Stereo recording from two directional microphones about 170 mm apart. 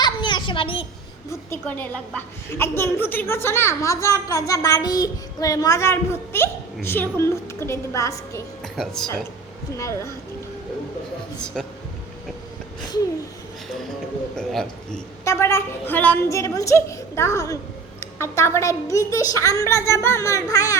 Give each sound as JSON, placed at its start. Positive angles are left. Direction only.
{"t": 0.0, "sound": "a sound", "side_deg": 25}
{"t": 1.3, "sound": "a woman's voice", "side_deg": 15}
{"t": 8.6, "sound": "a man's voice", "side_deg": 0}
{"t": 11.3, "sound": "a man's voice", "side_deg": 5}
{"t": 14.3, "sound": "a man's voice", "side_deg": 5}
{"t": 15.2, "sound": "a woman's voice", "side_deg": 15}